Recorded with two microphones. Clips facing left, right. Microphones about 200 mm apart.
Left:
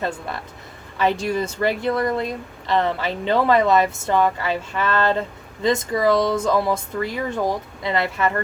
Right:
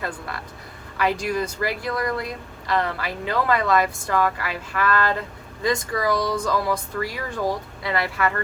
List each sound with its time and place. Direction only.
0.9 s speech: 25° left (ahead or behind)